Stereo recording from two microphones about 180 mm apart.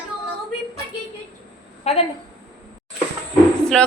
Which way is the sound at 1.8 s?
35° left (ahead or behind).